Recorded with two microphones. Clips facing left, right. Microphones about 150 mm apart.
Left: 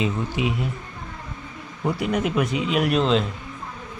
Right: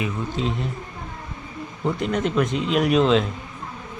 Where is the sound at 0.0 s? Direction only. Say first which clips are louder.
Left 1 dB; 10° left (ahead or behind).